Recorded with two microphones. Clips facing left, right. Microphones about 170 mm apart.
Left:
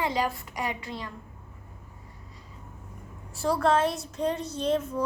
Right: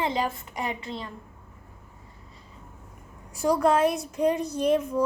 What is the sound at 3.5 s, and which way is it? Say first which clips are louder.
Speech: right 3 dB; 15° right (ahead or behind).